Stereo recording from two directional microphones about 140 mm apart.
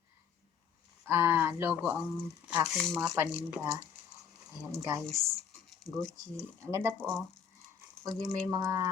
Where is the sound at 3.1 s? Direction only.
15° right (ahead or behind).